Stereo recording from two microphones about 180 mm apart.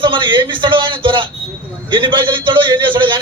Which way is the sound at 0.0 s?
30° right (ahead or behind).